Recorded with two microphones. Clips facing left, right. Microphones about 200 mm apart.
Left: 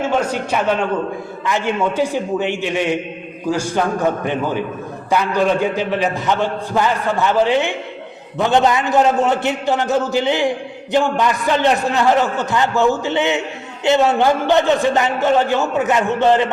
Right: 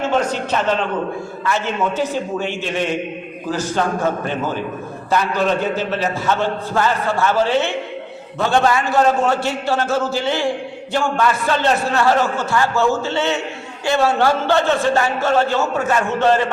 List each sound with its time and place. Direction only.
0.2 s a man's voice: 10° left (ahead or behind)